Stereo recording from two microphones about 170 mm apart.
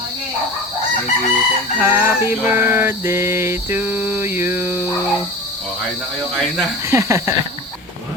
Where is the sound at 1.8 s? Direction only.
15° right (ahead or behind).